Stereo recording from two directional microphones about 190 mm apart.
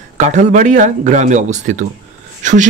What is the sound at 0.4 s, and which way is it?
Speech, 40° right (ahead or behind).